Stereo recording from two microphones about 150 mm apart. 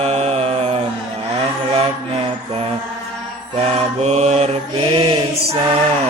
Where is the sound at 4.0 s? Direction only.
45° right (ahead or behind).